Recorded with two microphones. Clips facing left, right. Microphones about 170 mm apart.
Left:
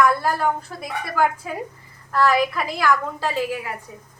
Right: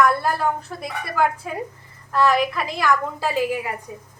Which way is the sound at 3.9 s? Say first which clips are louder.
Right 4 dB; 15° right (ahead or behind).